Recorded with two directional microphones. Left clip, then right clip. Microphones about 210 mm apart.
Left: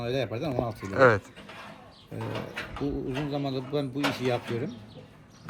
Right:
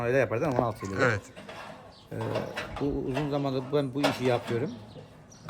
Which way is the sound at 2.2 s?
50° right (ahead or behind).